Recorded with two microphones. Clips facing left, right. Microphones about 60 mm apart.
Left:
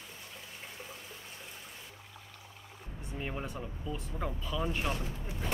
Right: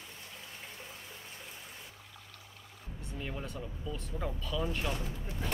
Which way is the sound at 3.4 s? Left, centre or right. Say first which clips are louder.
Left 1 dB; centre.